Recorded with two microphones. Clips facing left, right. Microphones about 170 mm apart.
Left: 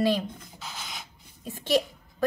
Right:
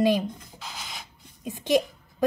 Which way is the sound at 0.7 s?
5° right (ahead or behind).